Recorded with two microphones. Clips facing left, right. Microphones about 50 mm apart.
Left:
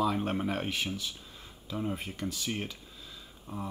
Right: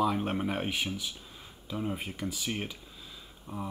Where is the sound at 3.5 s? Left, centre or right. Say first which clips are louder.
Right 1 dB; right.